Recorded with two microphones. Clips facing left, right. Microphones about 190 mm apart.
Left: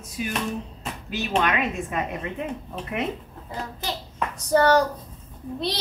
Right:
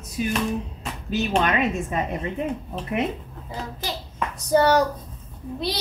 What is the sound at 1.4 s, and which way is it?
Speech, 35° right (ahead or behind).